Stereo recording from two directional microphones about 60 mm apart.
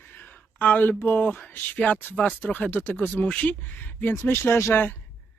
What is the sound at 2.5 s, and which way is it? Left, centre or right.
Speech, left.